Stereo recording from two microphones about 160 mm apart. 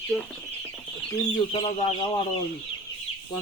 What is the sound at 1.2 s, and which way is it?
Speech, 30° left (ahead or behind).